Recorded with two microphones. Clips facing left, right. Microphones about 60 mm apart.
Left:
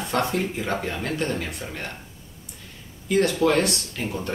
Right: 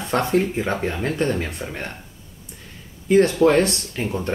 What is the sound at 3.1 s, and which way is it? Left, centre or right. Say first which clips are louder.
Speech: right 5 dB; right.